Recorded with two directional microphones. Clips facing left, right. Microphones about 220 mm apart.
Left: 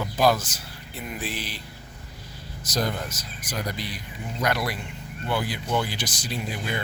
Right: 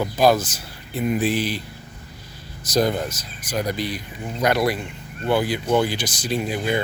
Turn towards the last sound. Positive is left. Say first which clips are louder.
# right 8 dB
turn(degrees=-15)  # may be behind; listen again after turning